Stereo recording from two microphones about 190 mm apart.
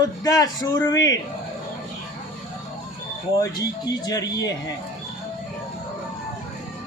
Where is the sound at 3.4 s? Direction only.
20° left (ahead or behind).